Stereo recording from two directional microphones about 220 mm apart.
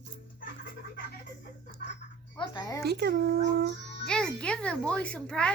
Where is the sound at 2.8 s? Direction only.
45° right (ahead or behind).